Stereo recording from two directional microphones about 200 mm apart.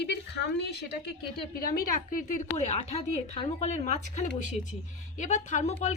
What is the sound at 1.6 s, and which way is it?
A woman's voice, 45° left (ahead or behind).